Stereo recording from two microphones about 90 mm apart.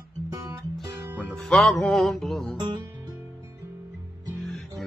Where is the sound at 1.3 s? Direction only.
5° left (ahead or behind).